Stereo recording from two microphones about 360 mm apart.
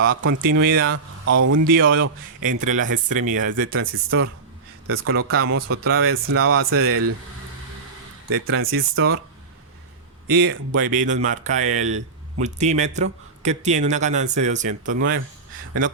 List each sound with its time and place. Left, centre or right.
0.1 s speech: right
1.2 s speech: right
1.6 s speech: right
2.4 s speech: right
8.3 s speech: right
10.2 s speech: right